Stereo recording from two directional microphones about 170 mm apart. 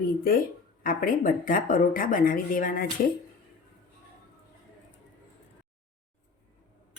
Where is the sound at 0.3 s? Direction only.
55° left (ahead or behind).